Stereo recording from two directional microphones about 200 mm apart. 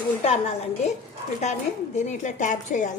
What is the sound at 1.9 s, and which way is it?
Speech, 35° left (ahead or behind).